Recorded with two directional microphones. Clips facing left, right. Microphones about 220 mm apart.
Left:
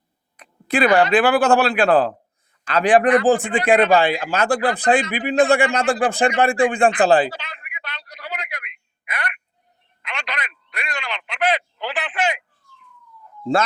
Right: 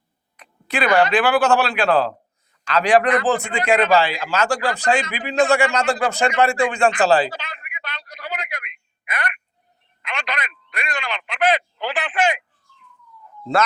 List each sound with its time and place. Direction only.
1.1 s speech: 50° left (ahead or behind)
7.3 s telephone: 50° right (ahead or behind)